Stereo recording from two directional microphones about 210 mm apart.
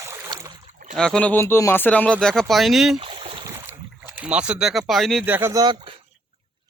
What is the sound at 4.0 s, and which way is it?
Speech, 10° right (ahead or behind).